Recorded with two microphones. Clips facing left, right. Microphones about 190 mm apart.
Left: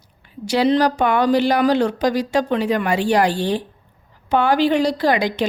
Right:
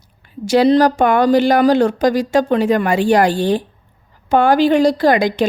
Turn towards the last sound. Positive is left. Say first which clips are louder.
# right 5 dB
turn(degrees=-50)  # may be behind; listen again after turning